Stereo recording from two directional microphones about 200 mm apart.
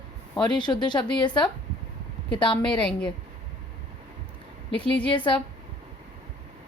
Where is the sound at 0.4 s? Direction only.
20° left (ahead or behind).